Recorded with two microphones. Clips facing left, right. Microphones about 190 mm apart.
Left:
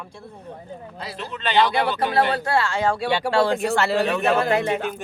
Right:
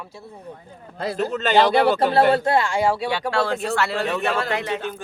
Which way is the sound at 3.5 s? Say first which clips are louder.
Left 3 dB; 15° left (ahead or behind).